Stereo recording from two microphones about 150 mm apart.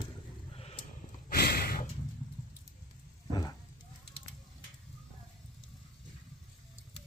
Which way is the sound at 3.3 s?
25° left (ahead or behind).